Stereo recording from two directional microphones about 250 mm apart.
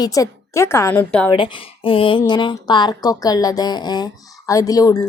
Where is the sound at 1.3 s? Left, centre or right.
Centre.